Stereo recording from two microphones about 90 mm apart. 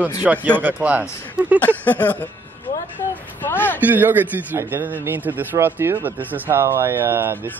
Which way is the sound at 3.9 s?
20° right (ahead or behind).